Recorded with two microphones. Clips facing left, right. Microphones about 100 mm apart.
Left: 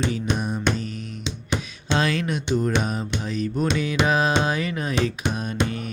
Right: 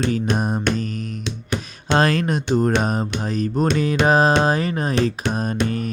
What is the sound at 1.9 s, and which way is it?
Speech, 45° right (ahead or behind).